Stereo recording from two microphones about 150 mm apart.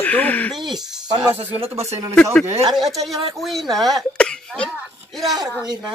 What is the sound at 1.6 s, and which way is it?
Speech, 45° right (ahead or behind).